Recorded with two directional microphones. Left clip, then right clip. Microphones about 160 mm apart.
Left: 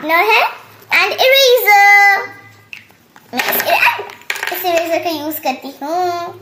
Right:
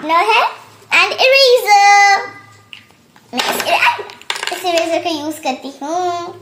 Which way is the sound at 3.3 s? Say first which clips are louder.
Left 1 dB; 10° left (ahead or behind).